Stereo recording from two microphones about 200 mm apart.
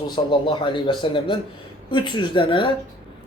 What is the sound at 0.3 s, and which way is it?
Speech, 25° left (ahead or behind).